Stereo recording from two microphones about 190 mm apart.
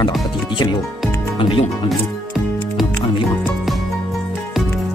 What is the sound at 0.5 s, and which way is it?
Speech, 25° left (ahead or behind).